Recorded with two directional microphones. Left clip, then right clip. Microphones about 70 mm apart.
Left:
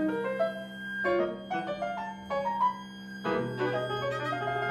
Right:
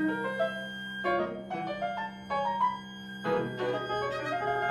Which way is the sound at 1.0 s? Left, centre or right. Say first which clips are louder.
Left 1 dB; left.